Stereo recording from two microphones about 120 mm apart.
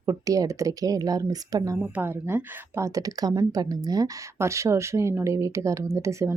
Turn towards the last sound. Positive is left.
turn(degrees=-25)  # may be behind; listen again after turning